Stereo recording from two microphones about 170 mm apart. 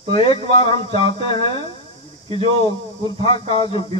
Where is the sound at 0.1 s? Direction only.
30° left (ahead or behind).